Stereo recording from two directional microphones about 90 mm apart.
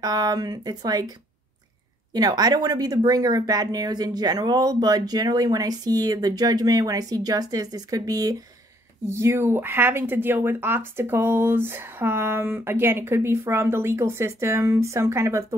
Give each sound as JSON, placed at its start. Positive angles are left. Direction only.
{"t": 0.0, "sound": "speech", "side_deg": -45}
{"t": 2.1, "sound": "speech", "side_deg": -45}
{"t": 9.1, "sound": "speech", "side_deg": -30}